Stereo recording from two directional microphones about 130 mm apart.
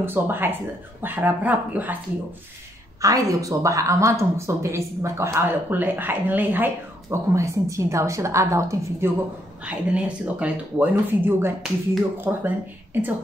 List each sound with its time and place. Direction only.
0.0 s speech: 15° right (ahead or behind)
3.0 s speech: 25° right (ahead or behind)
9.7 s speech: 10° right (ahead or behind)